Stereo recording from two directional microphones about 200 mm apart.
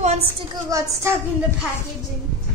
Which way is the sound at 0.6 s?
15° right (ahead or behind).